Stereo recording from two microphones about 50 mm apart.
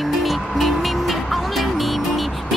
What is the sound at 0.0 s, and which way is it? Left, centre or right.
Music, centre.